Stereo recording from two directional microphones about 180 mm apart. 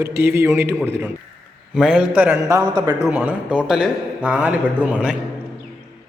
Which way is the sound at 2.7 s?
20° right (ahead or behind).